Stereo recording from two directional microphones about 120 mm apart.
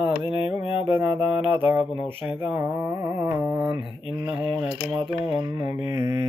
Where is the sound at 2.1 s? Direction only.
15° right (ahead or behind).